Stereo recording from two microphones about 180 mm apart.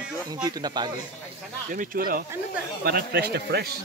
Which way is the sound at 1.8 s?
50° right (ahead or behind).